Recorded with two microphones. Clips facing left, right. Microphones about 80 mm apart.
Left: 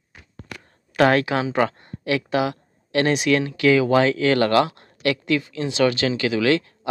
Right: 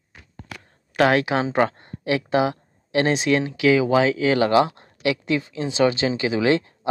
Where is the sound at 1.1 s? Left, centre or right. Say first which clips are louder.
Even; centre.